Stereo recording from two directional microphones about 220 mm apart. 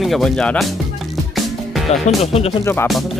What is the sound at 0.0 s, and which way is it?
Music, centre (ahead or behind).